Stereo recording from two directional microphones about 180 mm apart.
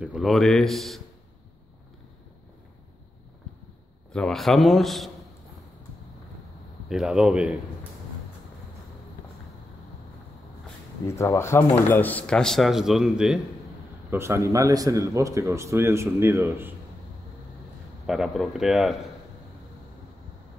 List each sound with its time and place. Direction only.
0.0 s speech: centre (ahead or behind)
4.1 s speech: 5° left (ahead or behind)
6.9 s speech: 5° right (ahead or behind)
11.1 s speech: 15° left (ahead or behind); by 13.4 s 5° right (ahead or behind)
14.1 s speech: 15° right (ahead or behind)
18.0 s speech: centre (ahead or behind)